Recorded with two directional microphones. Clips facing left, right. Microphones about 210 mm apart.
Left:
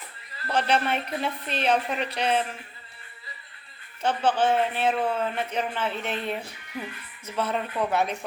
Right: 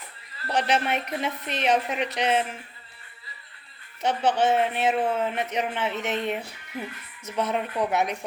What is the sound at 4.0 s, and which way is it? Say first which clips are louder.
A woman's voice: right 1 dB; 20° right (ahead or behind).